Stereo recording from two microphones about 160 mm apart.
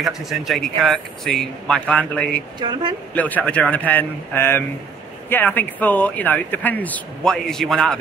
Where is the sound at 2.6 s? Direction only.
25° right (ahead or behind).